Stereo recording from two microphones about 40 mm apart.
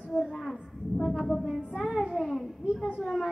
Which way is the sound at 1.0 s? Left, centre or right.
Centre.